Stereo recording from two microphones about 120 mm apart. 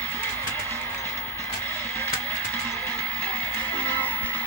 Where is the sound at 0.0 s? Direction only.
15° left (ahead or behind).